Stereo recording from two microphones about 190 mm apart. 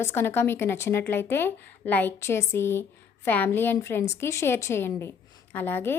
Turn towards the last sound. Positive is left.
turn(degrees=10)  # may be behind; listen again after turning